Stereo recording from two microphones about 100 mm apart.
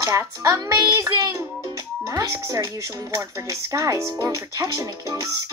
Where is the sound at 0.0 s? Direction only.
35° right (ahead or behind).